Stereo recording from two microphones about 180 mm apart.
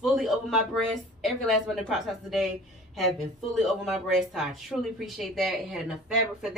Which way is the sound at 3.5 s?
Centre (ahead or behind).